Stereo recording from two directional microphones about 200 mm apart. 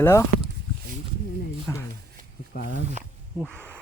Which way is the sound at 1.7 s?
15° left (ahead or behind).